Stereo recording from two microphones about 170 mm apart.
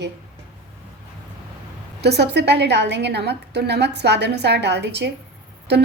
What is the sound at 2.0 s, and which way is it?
A woman's voice, 80° right.